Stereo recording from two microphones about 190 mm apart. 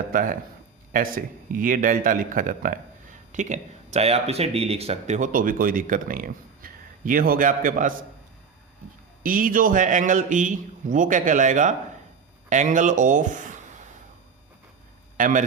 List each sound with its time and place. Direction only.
0.1 s speech: 45° right (ahead or behind)
9.2 s speech: 45° right (ahead or behind)
15.2 s a man's voice: 40° right (ahead or behind)